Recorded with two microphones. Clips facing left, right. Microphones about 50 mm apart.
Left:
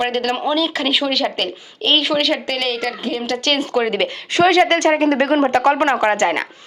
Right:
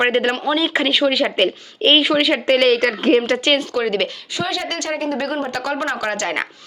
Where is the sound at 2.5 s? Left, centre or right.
Right.